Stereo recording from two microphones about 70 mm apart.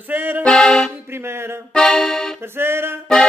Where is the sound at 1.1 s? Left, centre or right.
Right.